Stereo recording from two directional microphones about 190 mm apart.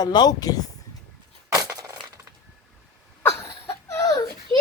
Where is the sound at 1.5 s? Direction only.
20° right (ahead or behind).